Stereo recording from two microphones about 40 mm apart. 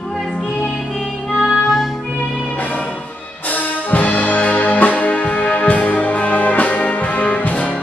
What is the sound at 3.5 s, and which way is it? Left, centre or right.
Music, left.